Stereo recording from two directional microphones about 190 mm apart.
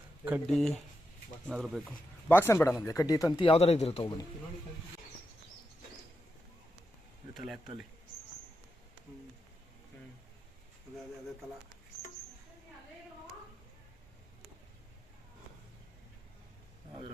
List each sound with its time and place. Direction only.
0.4 s speech: centre (ahead or behind)
2.3 s speech: 10° left (ahead or behind)
7.3 s speech: centre (ahead or behind)